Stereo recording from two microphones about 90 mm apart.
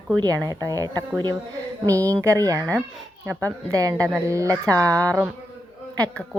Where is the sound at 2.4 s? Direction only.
40° right (ahead or behind).